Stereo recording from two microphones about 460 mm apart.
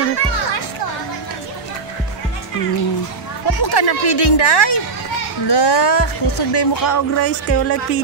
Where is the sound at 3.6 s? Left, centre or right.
Left.